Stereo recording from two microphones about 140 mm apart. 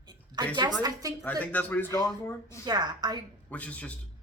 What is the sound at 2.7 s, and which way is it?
Speech, 30° right (ahead or behind).